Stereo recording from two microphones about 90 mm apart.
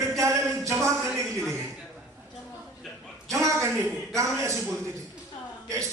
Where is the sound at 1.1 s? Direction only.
5° left (ahead or behind).